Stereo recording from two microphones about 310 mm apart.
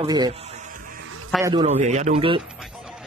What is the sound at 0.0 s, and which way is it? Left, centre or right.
Speech, centre.